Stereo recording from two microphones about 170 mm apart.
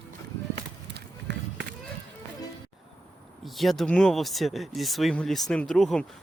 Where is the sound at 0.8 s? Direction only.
90° right.